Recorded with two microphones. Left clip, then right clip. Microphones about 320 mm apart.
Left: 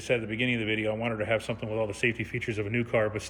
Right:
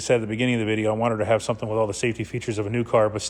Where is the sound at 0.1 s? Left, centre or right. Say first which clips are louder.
Right 6 dB; centre.